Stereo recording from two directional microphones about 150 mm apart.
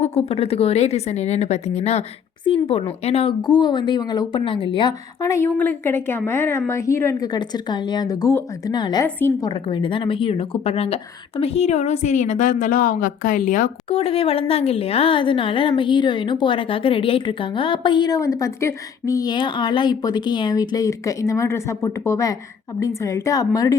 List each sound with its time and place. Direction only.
0.0 s speech: 40° left (ahead or behind)
3.4 s a woman's voice: 30° left (ahead or behind)
7.3 s speech: 30° left (ahead or behind); by 13.7 s 60° left (ahead or behind)
13.9 s a woman's voice: 40° left (ahead or behind); by 23.7 s 25° left (ahead or behind)